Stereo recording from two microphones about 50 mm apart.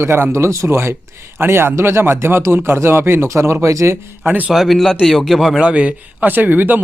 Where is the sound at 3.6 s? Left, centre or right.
Right.